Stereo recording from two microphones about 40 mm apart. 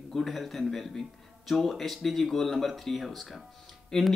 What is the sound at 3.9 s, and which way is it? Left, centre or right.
Speech, centre.